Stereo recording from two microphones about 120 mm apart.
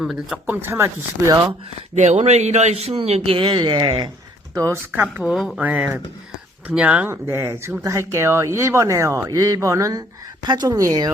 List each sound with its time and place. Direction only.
0.0 s speech: centre (ahead or behind)
0.4 s speech: 15° right (ahead or behind)
2.0 s a man's voice: 65° right (ahead or behind)
3.2 s speech: 45° right (ahead or behind)
4.5 s speech: 25° right (ahead or behind)
4.9 s speech: 10° right (ahead or behind); by 11.1 s 30° right (ahead or behind)